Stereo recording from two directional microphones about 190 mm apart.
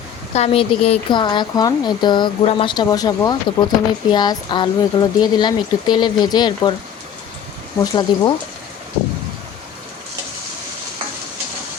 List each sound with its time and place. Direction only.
0.3 s speech: 30° left (ahead or behind)
8.1 s speech: 25° left (ahead or behind)